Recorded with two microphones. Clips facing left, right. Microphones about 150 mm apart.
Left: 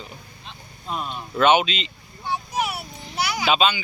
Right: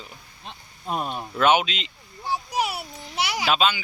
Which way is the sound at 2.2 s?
35° right (ahead or behind).